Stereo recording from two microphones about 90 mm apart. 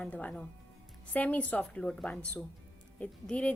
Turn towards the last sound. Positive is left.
turn(degrees=15)  # may be behind; listen again after turning